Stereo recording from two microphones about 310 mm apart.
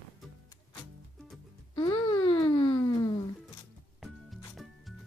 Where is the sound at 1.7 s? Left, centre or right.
Centre.